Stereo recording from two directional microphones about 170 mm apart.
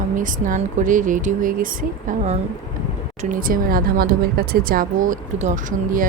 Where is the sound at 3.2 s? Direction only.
55° right (ahead or behind).